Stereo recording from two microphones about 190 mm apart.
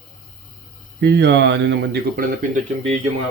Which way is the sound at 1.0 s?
60° right (ahead or behind).